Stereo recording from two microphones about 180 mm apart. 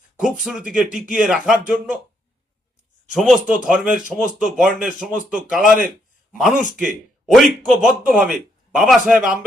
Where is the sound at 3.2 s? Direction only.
5° right (ahead or behind).